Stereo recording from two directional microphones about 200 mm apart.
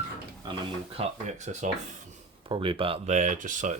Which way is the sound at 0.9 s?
35° right (ahead or behind).